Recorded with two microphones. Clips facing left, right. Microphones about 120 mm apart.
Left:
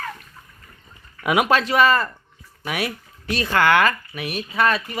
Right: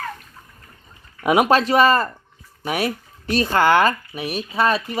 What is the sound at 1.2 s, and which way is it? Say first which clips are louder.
Speech: right 3 dB; 35° right (ahead or behind).